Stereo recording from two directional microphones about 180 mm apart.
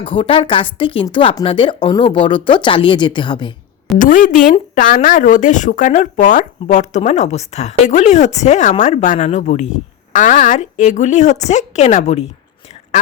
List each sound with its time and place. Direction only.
0.0 s speech: 30° left (ahead or behind)
3.9 s speech: 45° left (ahead or behind)